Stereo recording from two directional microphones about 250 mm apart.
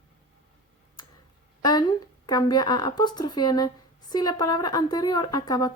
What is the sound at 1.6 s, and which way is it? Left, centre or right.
Speech, centre.